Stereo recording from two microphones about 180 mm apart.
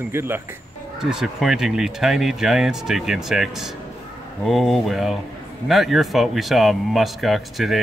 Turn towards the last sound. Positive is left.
turn(degrees=0)  # may be behind; listen again after turning